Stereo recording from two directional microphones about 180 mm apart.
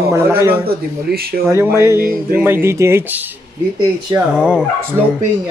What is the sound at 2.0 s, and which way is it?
Speech, 50° right (ahead or behind).